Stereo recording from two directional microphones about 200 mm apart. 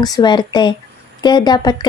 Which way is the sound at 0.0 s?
20° left (ahead or behind).